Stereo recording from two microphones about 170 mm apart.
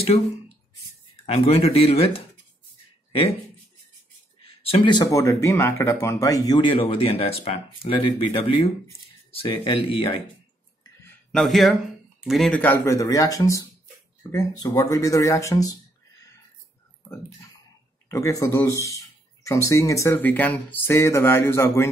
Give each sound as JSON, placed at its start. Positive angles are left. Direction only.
{"t": 1.2, "sound": "speech", "side_deg": 35}
{"t": 4.4, "sound": "speech", "side_deg": 35}
{"t": 11.3, "sound": "speech", "side_deg": 0}
{"t": 18.0, "sound": "speech", "side_deg": 20}